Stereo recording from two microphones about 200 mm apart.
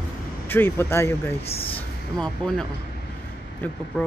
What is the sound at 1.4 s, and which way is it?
Speech, 30° left (ahead or behind).